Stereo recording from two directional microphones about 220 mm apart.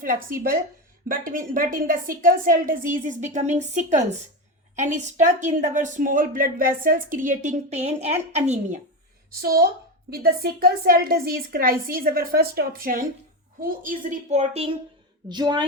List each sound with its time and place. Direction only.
0.0 s a woman's voice: 40° right (ahead or behind)
9.3 s a woman's voice: 45° right (ahead or behind); by 15.6 s 20° right (ahead or behind)